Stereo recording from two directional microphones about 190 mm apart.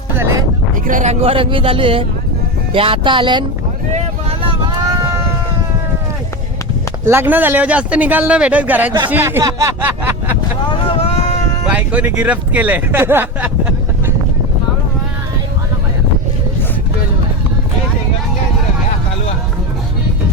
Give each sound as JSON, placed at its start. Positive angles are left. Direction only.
{"t": 0.2, "sound": "music", "side_deg": -15}
{"t": 0.9, "sound": "speech", "side_deg": -40}
{"t": 7.0, "sound": "speech", "side_deg": -10}
{"t": 10.8, "sound": "a sound", "side_deg": 30}
{"t": 11.7, "sound": "speech", "side_deg": -5}